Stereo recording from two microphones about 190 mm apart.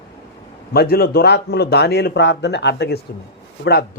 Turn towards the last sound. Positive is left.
turn(degrees=55)  # may be behind; listen again after turning